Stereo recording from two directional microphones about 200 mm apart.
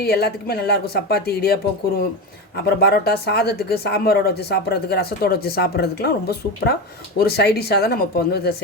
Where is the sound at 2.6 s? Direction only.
50° left (ahead or behind).